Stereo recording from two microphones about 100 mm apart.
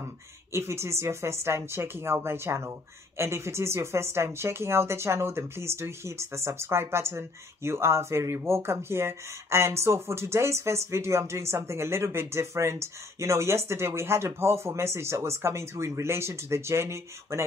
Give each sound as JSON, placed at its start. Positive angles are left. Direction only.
{"t": 0.5, "sound": "speech", "side_deg": -25}